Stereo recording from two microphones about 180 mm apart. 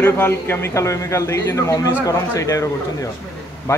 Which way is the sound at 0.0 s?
10° left (ahead or behind).